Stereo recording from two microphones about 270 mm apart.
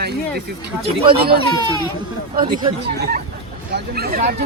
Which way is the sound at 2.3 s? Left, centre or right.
Right.